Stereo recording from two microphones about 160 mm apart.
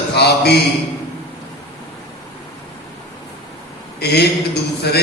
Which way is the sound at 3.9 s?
90° left.